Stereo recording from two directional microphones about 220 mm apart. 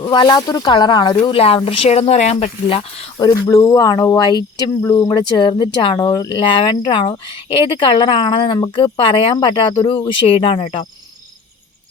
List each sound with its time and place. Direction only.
0.0 s speech: 20° left (ahead or behind)